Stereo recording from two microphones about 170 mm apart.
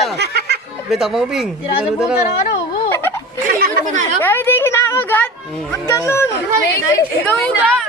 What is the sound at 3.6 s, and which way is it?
Chatter, 65° right (ahead or behind).